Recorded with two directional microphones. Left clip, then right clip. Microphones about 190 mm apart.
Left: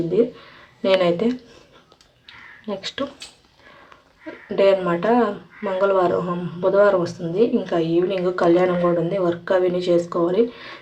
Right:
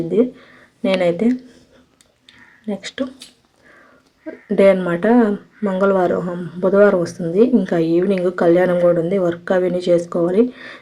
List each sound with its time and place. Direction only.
0.8 s speech: 15° right (ahead or behind)
2.6 s speech: 10° right (ahead or behind)
4.5 s speech: 25° right (ahead or behind)